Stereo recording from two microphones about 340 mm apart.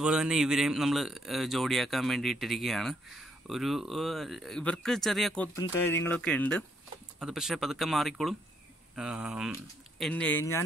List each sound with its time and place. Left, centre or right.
0.0 s speech: centre